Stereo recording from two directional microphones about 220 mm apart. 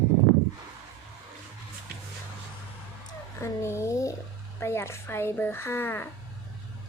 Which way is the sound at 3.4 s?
10° left (ahead or behind).